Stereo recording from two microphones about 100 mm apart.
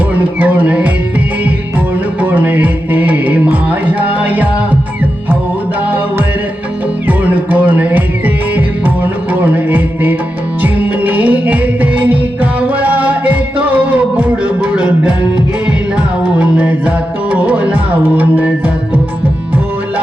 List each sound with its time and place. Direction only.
0.2 s music: 15° right (ahead or behind)
2.2 s music: 20° right (ahead or behind)
7.1 s music: 15° right (ahead or behind)
9.3 s music: 15° right (ahead or behind)
16.4 s music: 15° right (ahead or behind)